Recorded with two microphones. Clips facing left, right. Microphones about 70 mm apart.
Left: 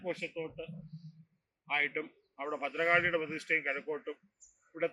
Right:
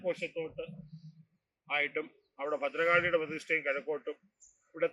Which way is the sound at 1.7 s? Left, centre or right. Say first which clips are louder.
Even; centre.